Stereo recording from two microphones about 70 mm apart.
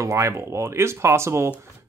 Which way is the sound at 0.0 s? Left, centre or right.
Right.